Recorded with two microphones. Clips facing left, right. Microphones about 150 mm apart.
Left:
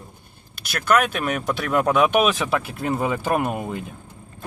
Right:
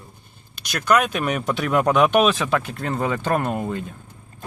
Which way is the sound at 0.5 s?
5° left (ahead or behind).